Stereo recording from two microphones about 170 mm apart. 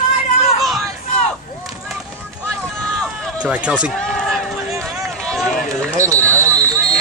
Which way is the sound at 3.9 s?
5° left (ahead or behind).